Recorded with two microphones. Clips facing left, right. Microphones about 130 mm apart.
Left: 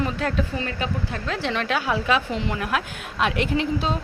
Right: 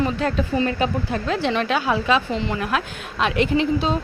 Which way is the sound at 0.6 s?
20° right (ahead or behind).